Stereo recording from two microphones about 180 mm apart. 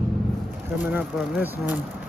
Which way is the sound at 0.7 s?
10° right (ahead or behind).